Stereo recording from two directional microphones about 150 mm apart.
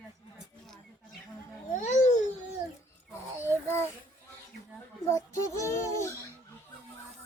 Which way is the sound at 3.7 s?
15° left (ahead or behind).